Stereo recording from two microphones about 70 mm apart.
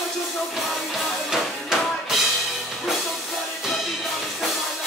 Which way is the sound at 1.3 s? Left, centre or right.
Centre.